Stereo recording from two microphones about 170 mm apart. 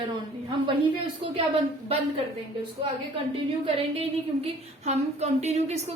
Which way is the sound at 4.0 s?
40° right (ahead or behind).